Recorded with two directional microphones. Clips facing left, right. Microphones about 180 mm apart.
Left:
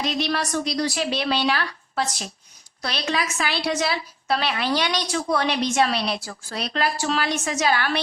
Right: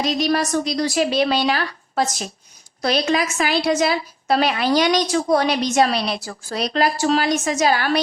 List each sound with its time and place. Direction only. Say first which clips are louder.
0.0 s a woman's voice: right 5 dB; 40° right (ahead or behind)